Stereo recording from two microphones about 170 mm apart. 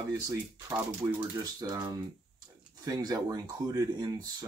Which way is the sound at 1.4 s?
20° right (ahead or behind).